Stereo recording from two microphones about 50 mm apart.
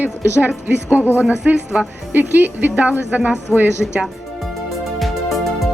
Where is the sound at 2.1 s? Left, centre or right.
Right.